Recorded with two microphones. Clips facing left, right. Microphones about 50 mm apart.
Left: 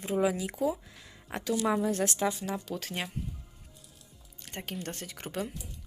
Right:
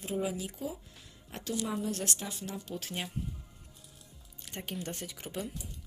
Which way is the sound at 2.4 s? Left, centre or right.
Left.